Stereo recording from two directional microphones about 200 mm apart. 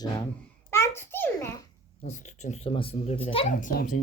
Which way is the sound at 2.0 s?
35° left (ahead or behind).